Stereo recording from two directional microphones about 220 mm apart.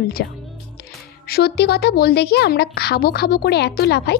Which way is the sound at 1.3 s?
45° left (ahead or behind).